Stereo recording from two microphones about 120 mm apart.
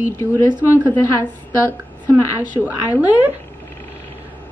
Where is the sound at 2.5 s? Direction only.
15° right (ahead or behind).